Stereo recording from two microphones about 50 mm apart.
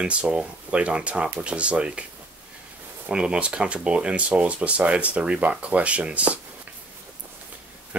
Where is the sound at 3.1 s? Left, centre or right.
Centre.